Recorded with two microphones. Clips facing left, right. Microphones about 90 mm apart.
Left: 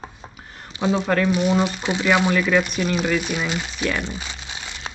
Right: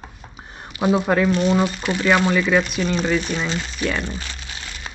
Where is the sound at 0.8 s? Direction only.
15° right (ahead or behind).